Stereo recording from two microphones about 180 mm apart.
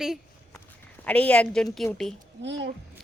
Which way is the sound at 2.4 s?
80° right.